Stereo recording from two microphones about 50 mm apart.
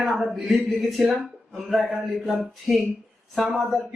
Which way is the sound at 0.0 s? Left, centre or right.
Centre.